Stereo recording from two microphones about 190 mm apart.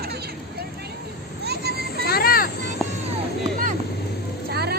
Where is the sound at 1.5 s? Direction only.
55° right (ahead or behind).